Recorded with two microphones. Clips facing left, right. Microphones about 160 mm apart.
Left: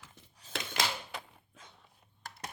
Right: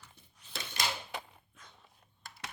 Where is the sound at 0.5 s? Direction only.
90° left.